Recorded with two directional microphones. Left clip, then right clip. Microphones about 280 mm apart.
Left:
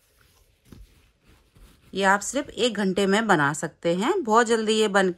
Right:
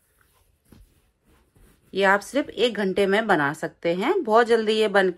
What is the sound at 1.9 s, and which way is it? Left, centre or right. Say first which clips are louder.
A woman's voice: right 1 dB; centre.